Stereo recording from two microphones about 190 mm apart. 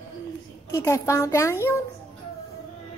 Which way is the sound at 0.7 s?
15° left (ahead or behind).